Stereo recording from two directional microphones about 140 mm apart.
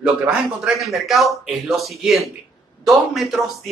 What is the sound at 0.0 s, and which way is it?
Speech, 10° right (ahead or behind).